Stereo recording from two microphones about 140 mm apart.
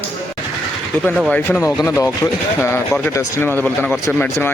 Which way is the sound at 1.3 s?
10° left (ahead or behind).